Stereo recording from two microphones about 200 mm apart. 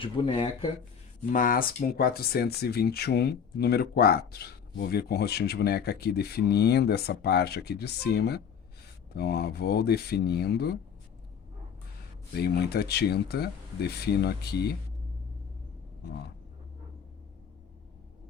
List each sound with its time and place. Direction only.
0.0 s speech: 25° left (ahead or behind)
1.3 s speech: 45° left (ahead or behind)
12.3 s speech: 55° left (ahead or behind)